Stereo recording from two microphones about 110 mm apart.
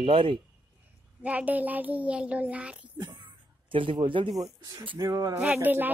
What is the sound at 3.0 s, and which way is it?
Speech, 50° right (ahead or behind).